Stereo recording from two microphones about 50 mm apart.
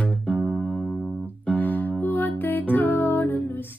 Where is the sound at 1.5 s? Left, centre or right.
Left.